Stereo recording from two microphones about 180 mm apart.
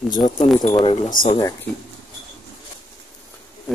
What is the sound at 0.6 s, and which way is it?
Speech, 45° left (ahead or behind).